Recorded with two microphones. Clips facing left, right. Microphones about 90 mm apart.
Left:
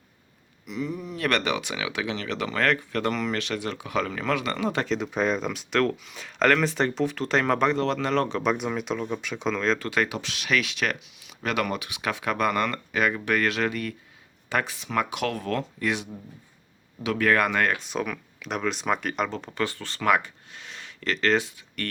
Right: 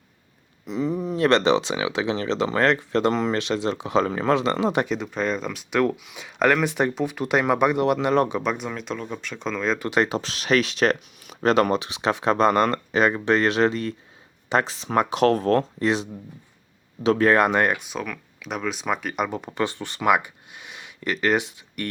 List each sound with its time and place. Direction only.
0.6 s speech: 30° right (ahead or behind)
4.9 s speech: centre (ahead or behind); by 8.4 s 15° right (ahead or behind)
8.4 s speech: centre (ahead or behind)
9.7 s speech: 20° right (ahead or behind)
10.2 s speech: 35° right (ahead or behind); by 17.8 s 20° right (ahead or behind)
17.8 s speech: centre (ahead or behind)
19.2 s speech: 15° right (ahead or behind)